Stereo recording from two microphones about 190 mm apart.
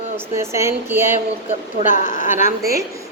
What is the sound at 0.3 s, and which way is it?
Speech, 15° right (ahead or behind).